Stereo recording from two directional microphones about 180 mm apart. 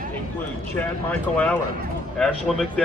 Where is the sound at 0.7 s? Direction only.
10° left (ahead or behind).